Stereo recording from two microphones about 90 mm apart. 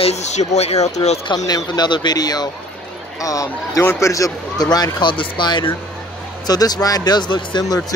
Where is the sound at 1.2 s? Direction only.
50° left (ahead or behind).